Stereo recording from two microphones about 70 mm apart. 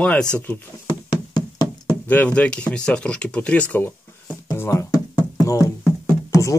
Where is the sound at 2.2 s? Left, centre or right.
Centre.